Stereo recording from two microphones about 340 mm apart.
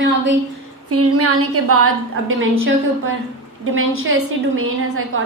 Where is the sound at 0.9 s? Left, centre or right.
Right.